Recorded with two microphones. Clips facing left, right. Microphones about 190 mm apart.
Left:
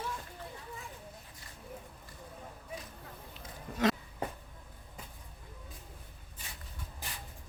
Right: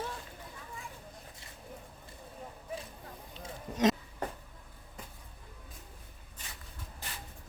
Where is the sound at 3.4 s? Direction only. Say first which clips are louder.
Right 2 dB; 20° right (ahead or behind).